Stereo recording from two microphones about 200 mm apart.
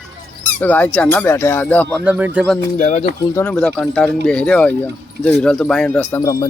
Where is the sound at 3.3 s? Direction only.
5° left (ahead or behind).